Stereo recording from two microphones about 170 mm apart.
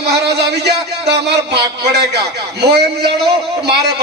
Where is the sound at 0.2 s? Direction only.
80° right.